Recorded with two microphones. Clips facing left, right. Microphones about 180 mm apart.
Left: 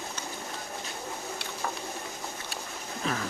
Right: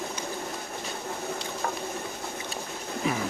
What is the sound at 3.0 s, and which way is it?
Music, 15° right (ahead or behind).